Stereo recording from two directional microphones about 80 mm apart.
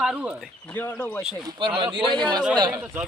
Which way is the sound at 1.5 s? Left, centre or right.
Right.